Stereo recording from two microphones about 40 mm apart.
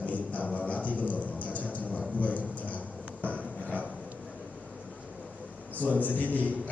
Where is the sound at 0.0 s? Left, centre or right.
Left.